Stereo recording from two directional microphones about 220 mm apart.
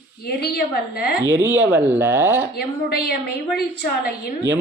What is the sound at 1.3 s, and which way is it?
A man's voice, 10° right (ahead or behind).